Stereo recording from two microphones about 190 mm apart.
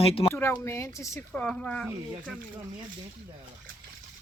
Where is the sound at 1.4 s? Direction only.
5° left (ahead or behind).